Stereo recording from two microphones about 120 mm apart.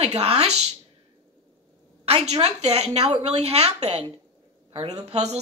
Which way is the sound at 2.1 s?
60° right (ahead or behind).